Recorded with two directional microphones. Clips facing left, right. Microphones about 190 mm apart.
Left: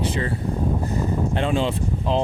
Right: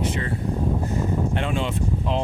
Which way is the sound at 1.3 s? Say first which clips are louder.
Left 3 dB; 30° left (ahead or behind).